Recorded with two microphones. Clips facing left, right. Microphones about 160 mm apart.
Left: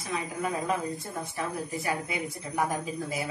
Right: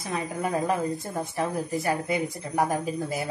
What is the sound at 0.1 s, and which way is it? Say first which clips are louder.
Speech: right 3 dB; 35° right (ahead or behind).